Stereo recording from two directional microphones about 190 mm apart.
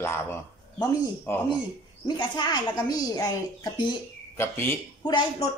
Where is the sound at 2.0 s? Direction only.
25° left (ahead or behind).